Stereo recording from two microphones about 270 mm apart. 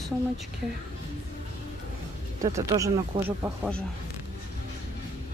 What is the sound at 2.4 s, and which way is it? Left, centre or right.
Speech, centre.